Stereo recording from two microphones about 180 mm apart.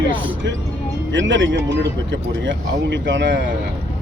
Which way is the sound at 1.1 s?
90° right.